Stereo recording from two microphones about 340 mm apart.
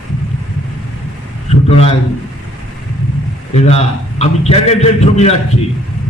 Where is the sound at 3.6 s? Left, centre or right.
Centre.